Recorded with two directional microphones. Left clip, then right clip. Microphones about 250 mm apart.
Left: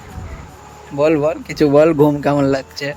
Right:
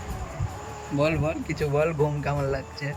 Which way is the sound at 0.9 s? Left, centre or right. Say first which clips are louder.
Left 11 dB; centre.